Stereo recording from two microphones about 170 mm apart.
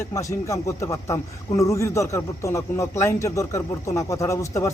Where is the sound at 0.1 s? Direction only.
20° left (ahead or behind).